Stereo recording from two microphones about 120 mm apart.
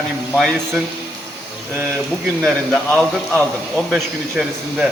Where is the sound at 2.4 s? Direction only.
Centre (ahead or behind).